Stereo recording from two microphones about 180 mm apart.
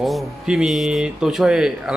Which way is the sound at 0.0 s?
Centre (ahead or behind).